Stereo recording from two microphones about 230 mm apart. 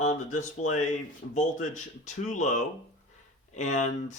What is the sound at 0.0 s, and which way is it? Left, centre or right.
Speech, left.